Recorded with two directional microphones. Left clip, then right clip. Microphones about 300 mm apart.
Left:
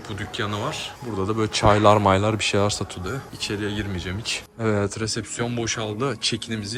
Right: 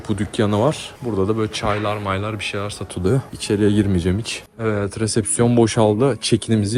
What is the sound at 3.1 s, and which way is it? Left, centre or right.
Speech, centre.